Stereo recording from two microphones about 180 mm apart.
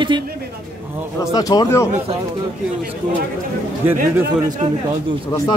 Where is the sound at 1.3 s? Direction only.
20° left (ahead or behind).